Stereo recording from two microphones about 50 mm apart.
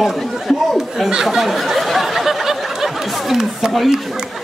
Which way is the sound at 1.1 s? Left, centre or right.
Centre.